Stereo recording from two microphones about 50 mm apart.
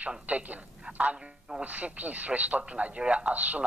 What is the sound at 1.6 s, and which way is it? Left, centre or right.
Speech, right.